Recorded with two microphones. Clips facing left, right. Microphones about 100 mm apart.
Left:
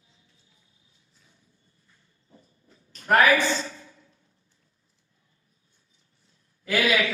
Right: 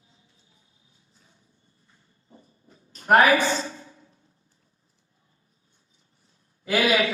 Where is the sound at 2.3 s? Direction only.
30° right (ahead or behind).